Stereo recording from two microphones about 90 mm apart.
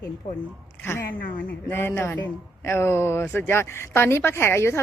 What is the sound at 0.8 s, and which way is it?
A woman's voice, 30° left (ahead or behind).